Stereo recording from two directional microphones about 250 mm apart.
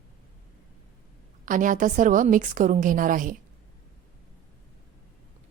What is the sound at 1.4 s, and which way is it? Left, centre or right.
A woman's voice, right.